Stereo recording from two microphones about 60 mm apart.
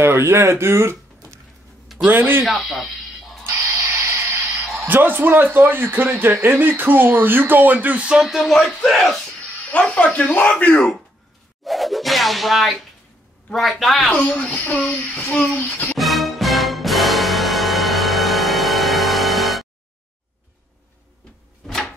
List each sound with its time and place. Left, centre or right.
0.0 s speech: right
2.0 s speech: right
2.4 s speech: centre
3.4 s a sound: right
4.8 s speech: right
8.0 s speech: centre
8.3 s speech: centre
9.7 s child singing: centre
11.6 s a sound: centre
13.5 s speech: centre
14.2 s child singing: left
16.0 s music: centre
21.6 s a sound: centre